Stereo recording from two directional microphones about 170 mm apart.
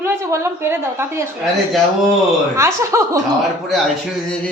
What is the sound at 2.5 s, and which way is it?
Speech, 15° right (ahead or behind).